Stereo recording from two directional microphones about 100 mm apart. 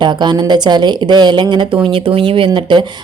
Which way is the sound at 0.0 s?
50° right (ahead or behind).